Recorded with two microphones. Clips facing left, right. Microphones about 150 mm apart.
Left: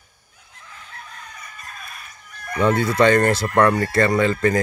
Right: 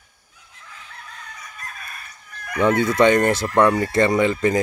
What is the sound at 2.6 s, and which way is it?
Speech, 15° right (ahead or behind).